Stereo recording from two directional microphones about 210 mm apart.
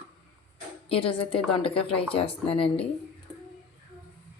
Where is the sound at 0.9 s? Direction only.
25° left (ahead or behind).